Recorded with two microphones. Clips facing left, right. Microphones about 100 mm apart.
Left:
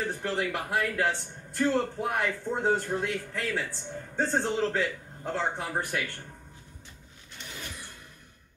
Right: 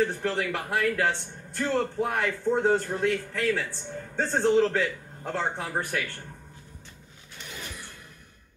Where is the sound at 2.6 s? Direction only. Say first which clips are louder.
Even; 10° left (ahead or behind).